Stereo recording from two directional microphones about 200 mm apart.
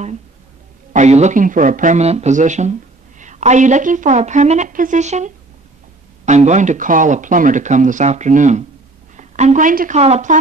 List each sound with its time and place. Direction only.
0.9 s speech: 35° right (ahead or behind)